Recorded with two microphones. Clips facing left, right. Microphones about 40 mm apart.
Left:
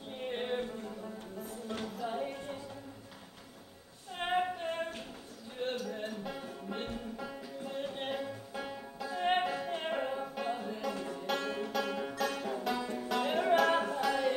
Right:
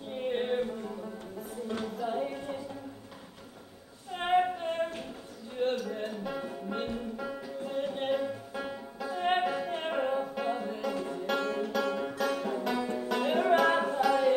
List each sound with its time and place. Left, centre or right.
0.1 s a sound: centre
4.1 s female singing: centre
5.6 s music: centre
12.7 s music: centre
13.1 s music: centre